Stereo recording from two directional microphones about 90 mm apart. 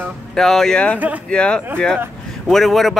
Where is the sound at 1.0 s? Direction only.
15° right (ahead or behind).